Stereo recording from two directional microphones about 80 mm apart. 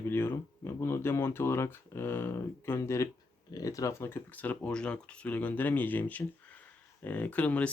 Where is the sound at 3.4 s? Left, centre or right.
Left; by 7.7 s centre.